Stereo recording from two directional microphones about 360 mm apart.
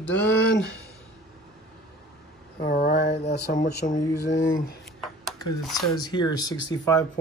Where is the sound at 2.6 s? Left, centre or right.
Left.